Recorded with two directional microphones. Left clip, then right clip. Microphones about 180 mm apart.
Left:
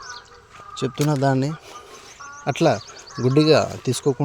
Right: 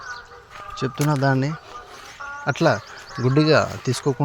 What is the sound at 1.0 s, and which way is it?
Speech, 20° left (ahead or behind).